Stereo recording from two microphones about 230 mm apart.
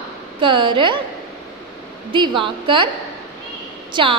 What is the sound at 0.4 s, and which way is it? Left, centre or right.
Speech, right.